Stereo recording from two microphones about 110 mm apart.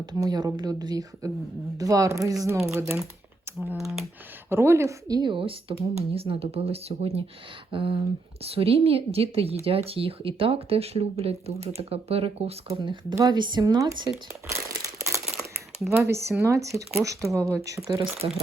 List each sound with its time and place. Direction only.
0.0 s a woman's voice: 40° right (ahead or behind)
3.8 s speech: centre (ahead or behind)
4.4 s a woman's voice: 20° right (ahead or behind)
5.3 s speech: 55° right (ahead or behind)
5.8 s speech: 70° right (ahead or behind)
7.7 s speech: 55° right (ahead or behind)
12.8 s speech: 45° right (ahead or behind)
14.5 s crumpling: 30° right (ahead or behind)
16.0 s a woman's voice: 25° right (ahead or behind)
18.2 s speech: 45° right (ahead or behind)